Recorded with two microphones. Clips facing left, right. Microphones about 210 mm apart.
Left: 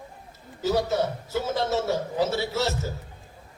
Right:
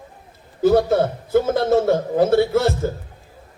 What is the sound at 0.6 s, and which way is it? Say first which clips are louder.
A man's voice: right 9 dB; 55° right (ahead or behind).